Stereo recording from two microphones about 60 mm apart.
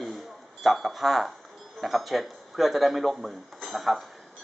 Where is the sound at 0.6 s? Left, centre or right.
Centre.